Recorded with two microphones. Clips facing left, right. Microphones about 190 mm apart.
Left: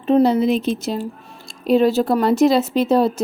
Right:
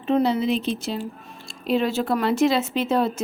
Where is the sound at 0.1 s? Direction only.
40° left (ahead or behind).